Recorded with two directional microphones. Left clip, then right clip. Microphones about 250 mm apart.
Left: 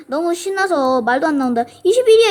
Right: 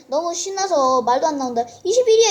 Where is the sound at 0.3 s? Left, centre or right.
Left.